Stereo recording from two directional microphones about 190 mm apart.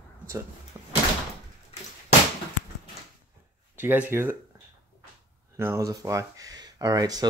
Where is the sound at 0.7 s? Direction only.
10° right (ahead or behind).